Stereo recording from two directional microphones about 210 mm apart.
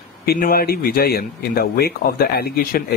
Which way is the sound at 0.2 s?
45° left (ahead or behind).